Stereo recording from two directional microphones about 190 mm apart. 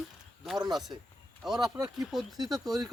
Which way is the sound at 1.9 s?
Centre (ahead or behind).